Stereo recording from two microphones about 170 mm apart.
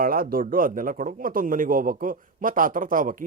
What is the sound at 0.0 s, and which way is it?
A man's voice, 60° right (ahead or behind).